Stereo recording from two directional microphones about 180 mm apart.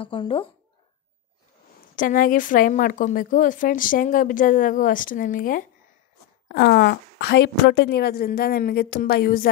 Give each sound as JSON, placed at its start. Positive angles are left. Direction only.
{"t": 0.0, "sound": "speech", "side_deg": 30}
{"t": 2.0, "sound": "speech", "side_deg": 50}
{"t": 6.5, "sound": "a woman's voice", "side_deg": 60}